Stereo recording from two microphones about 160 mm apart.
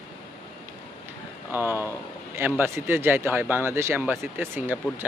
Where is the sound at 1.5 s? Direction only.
15° right (ahead or behind).